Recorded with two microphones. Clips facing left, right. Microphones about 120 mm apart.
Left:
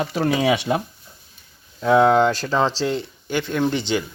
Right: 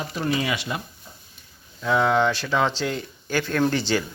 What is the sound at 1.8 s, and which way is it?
Speech, 45° left (ahead or behind).